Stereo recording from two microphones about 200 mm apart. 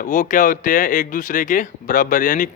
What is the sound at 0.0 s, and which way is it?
Speech, 40° left (ahead or behind).